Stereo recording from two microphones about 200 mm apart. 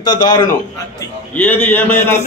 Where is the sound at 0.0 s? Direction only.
20° left (ahead or behind).